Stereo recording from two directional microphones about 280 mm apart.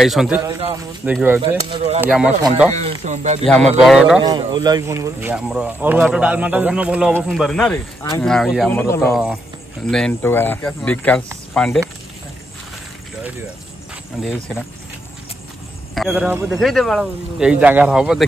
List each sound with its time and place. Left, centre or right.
0.0 s speech: centre
0.4 s a man's voice: centre
1.0 s a man's voice: centre
2.0 s speech: centre
2.7 s speech: right
3.8 s speech: centre
4.2 s speech: centre
9.1 s speech: centre
15.9 s speech: centre